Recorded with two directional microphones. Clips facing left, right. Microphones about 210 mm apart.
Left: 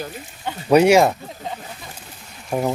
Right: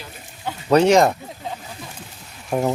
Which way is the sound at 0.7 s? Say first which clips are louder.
Left 1 dB; 10° left (ahead or behind).